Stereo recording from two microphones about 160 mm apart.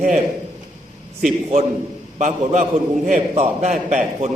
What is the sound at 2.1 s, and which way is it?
A man's voice, 50° right (ahead or behind).